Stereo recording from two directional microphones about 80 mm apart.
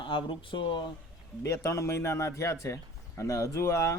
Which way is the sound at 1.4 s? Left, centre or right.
Left.